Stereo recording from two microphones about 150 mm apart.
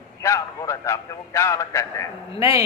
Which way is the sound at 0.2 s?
20° left (ahead or behind).